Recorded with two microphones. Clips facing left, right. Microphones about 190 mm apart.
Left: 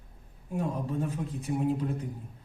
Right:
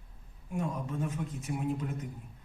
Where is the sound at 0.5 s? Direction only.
35° left (ahead or behind).